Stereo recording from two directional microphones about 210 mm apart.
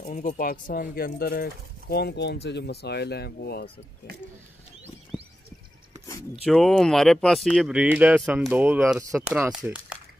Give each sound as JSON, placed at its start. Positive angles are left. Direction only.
{"t": 0.0, "sound": "speech", "side_deg": 40}
{"t": 5.1, "sound": "a sound", "side_deg": -5}
{"t": 6.4, "sound": "speech", "side_deg": 0}